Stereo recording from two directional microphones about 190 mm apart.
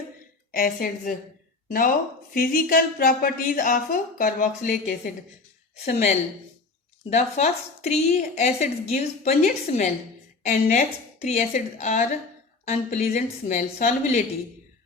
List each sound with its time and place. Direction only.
0.5 s a woman's voice: 50° left (ahead or behind)
2.3 s a woman's voice: 50° left (ahead or behind)